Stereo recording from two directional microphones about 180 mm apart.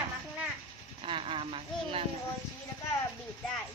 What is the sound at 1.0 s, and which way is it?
Speech, 30° right (ahead or behind).